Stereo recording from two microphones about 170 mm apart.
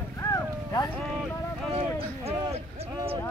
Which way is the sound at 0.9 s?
Centre (ahead or behind).